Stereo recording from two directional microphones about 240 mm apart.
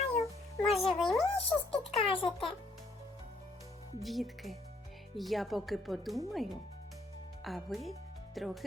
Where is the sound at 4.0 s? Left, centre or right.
Centre.